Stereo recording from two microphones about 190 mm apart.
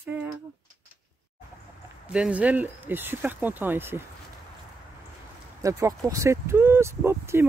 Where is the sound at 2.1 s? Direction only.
5° right (ahead or behind).